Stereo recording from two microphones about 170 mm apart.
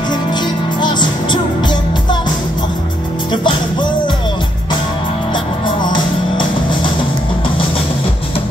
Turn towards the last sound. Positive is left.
turn(degrees=30)  # may be behind; listen again after turning